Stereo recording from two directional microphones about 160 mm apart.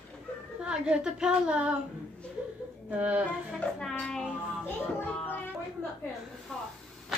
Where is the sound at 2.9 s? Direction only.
10° right (ahead or behind).